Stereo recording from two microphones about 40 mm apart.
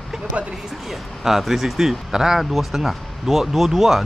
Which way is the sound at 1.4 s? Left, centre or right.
Centre.